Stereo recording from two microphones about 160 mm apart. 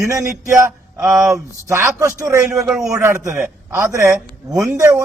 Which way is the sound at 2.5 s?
5° right (ahead or behind).